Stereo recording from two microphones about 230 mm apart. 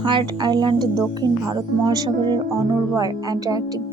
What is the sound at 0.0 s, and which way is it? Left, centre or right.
A woman's voice, right.